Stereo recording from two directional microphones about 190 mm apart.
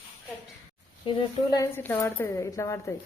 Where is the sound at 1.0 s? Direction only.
25° left (ahead or behind).